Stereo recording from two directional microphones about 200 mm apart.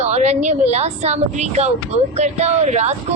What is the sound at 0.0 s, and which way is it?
A woman's voice, 35° right (ahead or behind).